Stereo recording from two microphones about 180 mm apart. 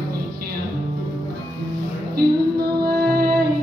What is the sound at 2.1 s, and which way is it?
Music, 55° right (ahead or behind).